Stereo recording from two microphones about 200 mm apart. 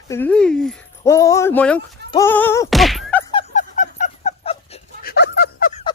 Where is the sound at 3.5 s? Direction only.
40° left (ahead or behind).